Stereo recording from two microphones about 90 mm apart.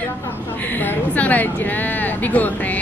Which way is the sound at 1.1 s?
15° left (ahead or behind).